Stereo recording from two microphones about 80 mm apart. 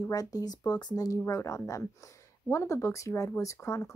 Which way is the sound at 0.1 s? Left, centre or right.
Left.